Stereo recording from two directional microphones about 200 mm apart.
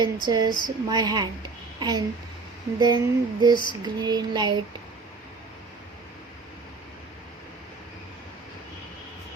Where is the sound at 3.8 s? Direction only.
20° right (ahead or behind).